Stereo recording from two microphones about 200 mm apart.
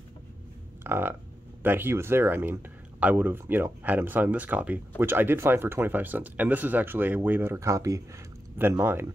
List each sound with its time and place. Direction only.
0.8 s speech: 10° right (ahead or behind)